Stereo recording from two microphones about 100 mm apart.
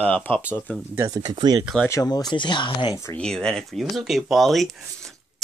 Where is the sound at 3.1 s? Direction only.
5° left (ahead or behind).